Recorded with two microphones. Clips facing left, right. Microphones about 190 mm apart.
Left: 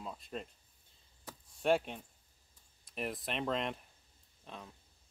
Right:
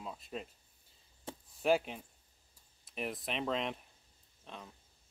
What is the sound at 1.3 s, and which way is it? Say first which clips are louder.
Chop: right 6 dB; 25° right (ahead or behind).